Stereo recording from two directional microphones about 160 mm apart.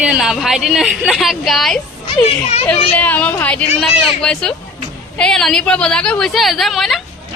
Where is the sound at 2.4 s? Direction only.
40° left (ahead or behind).